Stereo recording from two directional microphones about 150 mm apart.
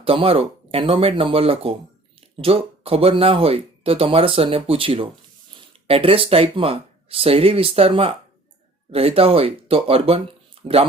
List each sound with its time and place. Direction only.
0.0 s speech: 40° right (ahead or behind)